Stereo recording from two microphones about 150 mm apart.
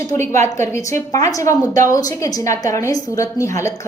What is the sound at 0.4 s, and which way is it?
Speech, 20° left (ahead or behind).